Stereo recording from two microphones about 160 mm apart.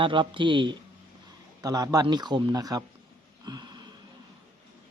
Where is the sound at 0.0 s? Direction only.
30° right (ahead or behind).